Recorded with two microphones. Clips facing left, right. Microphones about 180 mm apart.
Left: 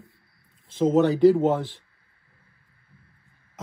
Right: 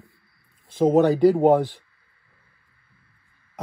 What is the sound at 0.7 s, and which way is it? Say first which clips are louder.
Speech: right 2 dB; 50° right (ahead or behind).